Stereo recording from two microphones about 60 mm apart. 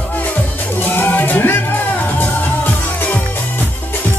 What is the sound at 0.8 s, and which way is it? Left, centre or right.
Music, left.